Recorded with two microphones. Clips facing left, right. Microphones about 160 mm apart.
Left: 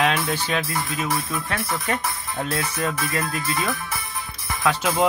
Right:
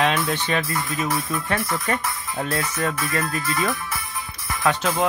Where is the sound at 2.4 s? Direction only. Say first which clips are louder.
Right 1 dB; 10° right (ahead or behind).